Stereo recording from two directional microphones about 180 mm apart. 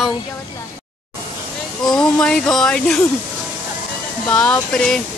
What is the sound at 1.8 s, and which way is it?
Speech, 5° left (ahead or behind).